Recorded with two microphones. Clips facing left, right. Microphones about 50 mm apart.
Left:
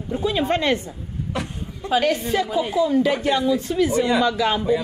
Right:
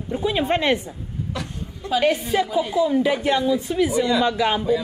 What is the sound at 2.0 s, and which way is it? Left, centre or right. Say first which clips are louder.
Speech: right 1 dB; centre.